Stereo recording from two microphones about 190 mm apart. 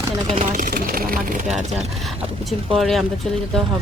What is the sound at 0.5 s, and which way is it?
Speech, 50° right (ahead or behind).